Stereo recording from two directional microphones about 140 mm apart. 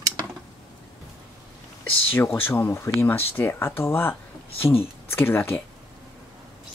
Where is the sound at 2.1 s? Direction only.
15° left (ahead or behind).